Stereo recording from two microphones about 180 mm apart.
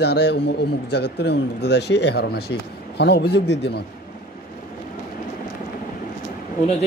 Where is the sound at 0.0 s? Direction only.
70° left (ahead or behind).